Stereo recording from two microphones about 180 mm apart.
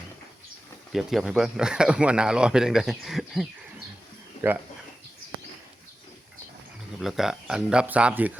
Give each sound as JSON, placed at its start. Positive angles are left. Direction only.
{"t": 0.9, "sound": "speech", "side_deg": 0}
{"t": 4.4, "sound": "a sound", "side_deg": 30}
{"t": 7.0, "sound": "speech", "side_deg": 0}